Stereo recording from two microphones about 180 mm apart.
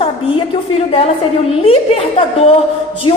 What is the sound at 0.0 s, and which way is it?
A woman's voice, 30° left (ahead or behind).